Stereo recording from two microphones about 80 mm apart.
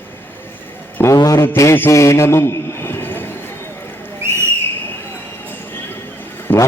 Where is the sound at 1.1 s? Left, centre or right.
Left.